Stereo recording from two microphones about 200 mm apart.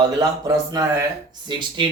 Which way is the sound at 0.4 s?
20° right (ahead or behind).